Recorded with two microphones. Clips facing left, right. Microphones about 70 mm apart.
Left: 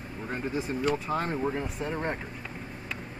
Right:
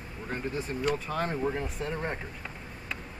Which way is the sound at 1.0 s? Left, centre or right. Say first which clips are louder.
Left 1 dB; centre.